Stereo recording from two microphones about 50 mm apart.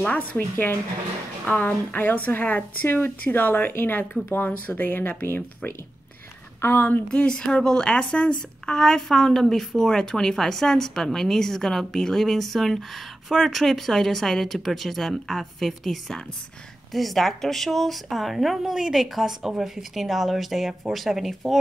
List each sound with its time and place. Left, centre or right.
0.1 s speech: left
2.0 s speech: left
7.1 s a woman's voice: centre